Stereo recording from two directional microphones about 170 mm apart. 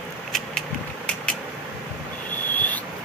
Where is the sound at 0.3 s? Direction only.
5° left (ahead or behind).